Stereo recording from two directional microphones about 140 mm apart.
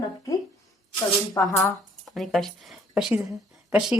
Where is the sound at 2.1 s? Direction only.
Centre (ahead or behind).